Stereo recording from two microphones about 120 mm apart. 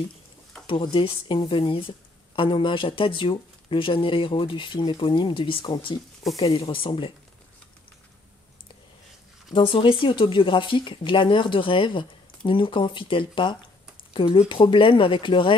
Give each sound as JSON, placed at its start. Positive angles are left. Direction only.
{"t": 0.7, "sound": "speech", "side_deg": 45}
{"t": 9.5, "sound": "speech", "side_deg": 45}